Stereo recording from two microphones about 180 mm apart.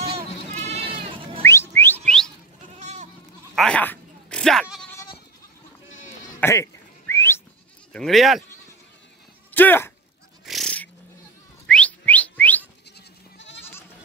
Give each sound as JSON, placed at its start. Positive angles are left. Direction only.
{"t": 0.1, "sound": "sheep", "side_deg": -35}
{"t": 1.4, "sound": "whistling", "side_deg": 15}
{"t": 2.8, "sound": "goat", "side_deg": -40}
{"t": 3.5, "sound": "bleat", "side_deg": 5}
{"t": 4.9, "sound": "goat", "side_deg": 25}
{"t": 6.4, "sound": "whistling", "side_deg": 15}
{"t": 7.9, "sound": "speech", "side_deg": 0}
{"t": 9.5, "sound": "speech", "side_deg": 10}
{"t": 10.4, "sound": "a sound", "side_deg": 0}
{"t": 11.6, "sound": "whistling", "side_deg": 5}